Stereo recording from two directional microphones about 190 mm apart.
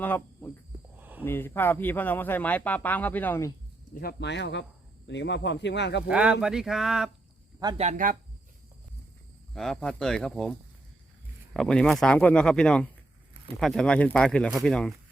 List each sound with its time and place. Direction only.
0.0 s speech: 10° left (ahead or behind)
0.9 s a sound: 10° right (ahead or behind)
1.2 s speech: 10° left (ahead or behind)
4.0 s speech: 65° left (ahead or behind)
6.1 s speech: 5° right (ahead or behind)
7.8 s speech: 40° right (ahead or behind)
9.6 s speech: 5° left (ahead or behind)
11.5 s speech: 5° left (ahead or behind)